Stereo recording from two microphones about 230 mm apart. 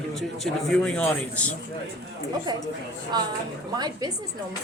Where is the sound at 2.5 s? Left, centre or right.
Centre.